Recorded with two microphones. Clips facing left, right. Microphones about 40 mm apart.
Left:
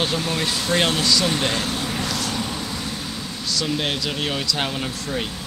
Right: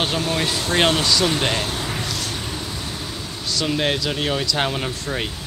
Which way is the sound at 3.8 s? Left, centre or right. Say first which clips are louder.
Right 3 dB; right.